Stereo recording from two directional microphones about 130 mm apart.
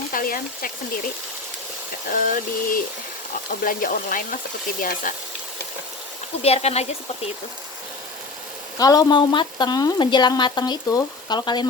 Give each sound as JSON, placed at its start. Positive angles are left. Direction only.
{"t": 0.1, "sound": "speech", "side_deg": 90}
{"t": 6.4, "sound": "speech", "side_deg": 50}
{"t": 8.8, "sound": "speech", "side_deg": 30}